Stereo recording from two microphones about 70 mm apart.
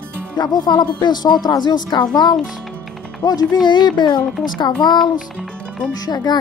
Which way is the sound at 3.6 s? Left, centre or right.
Left.